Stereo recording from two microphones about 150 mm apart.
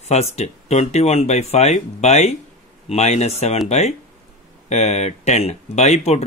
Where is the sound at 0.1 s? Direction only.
45° left (ahead or behind).